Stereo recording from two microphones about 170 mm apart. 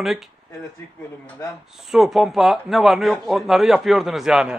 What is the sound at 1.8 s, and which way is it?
A man's voice, centre (ahead or behind).